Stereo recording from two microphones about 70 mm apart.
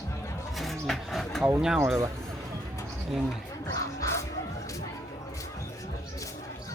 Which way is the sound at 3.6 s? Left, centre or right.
Left.